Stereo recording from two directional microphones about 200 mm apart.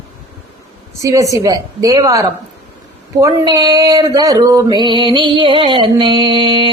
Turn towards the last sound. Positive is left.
turn(degrees=-25)  # may be behind; listen again after turning